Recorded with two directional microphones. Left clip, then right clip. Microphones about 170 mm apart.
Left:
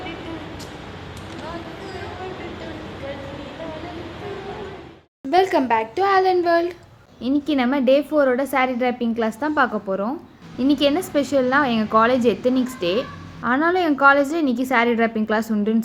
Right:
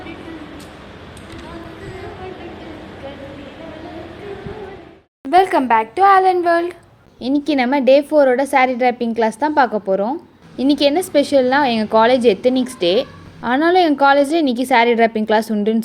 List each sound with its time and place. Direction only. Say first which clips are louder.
5.3 s a child's voice: right 5 dB; 15° right (ahead or behind)
7.2 s a woman's voice: right 4 dB; 25° right (ahead or behind)